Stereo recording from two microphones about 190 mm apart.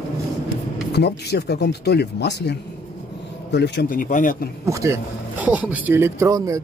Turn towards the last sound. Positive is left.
turn(degrees=-15)  # may be behind; listen again after turning